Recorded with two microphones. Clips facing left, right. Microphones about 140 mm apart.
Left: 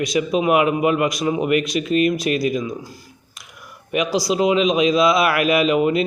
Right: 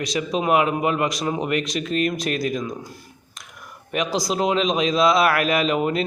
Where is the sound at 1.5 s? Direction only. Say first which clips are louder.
Left 5 dB; 40° right (ahead or behind).